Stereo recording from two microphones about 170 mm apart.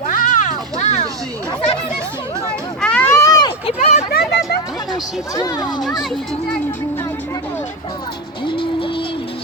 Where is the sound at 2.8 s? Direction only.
5° left (ahead or behind).